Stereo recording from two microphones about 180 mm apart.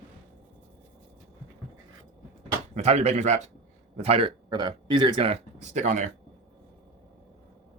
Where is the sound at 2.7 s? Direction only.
35° right (ahead or behind).